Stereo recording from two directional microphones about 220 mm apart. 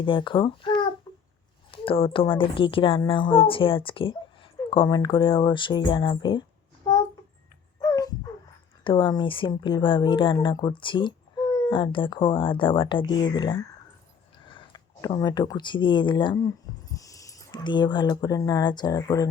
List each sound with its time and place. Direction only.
0.0 s speech: 20° left (ahead or behind)
1.1 s a sound: 20° left (ahead or behind)
1.7 s speech: 25° left (ahead or behind)
7.8 s dog: 15° left (ahead or behind)
8.8 s speech: 20° left (ahead or behind)